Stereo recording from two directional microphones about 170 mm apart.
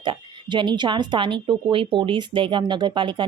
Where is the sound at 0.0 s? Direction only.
30° right (ahead or behind).